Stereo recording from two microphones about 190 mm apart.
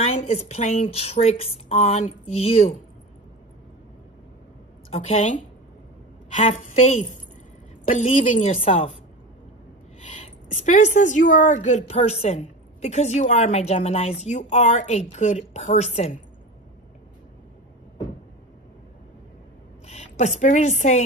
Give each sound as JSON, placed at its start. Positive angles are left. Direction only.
{"t": 0.0, "sound": "a woman's voice", "side_deg": 30}
{"t": 4.9, "sound": "a woman's voice", "side_deg": 35}
{"t": 6.3, "sound": "a woman's voice", "side_deg": 35}
{"t": 9.9, "sound": "a woman's voice", "side_deg": 35}
{"t": 19.9, "sound": "a woman's voice", "side_deg": 35}